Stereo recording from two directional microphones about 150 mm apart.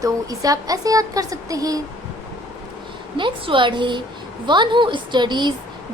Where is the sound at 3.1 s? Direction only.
35° right (ahead or behind).